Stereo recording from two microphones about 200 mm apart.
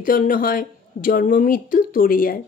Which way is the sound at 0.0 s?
45° left (ahead or behind).